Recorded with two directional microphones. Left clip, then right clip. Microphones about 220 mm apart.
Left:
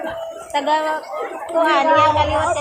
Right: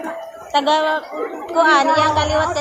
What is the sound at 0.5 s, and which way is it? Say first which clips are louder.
A woman's voice: right 3 dB; 35° right (ahead or behind).